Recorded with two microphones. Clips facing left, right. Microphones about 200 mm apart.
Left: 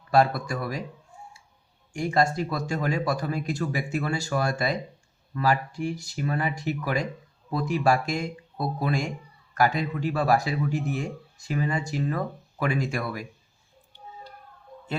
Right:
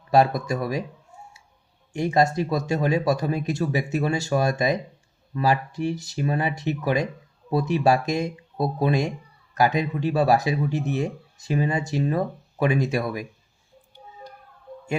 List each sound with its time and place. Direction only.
0.1 s speech: 20° right (ahead or behind)
1.9 s speech: 20° right (ahead or behind)